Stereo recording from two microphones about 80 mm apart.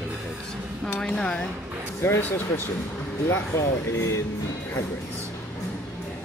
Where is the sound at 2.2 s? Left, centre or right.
Left.